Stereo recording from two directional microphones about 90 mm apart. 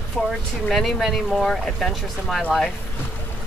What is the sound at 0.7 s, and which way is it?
Speech, centre (ahead or behind).